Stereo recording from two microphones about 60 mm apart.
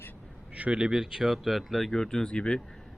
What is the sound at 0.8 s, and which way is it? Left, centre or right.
Speech, centre.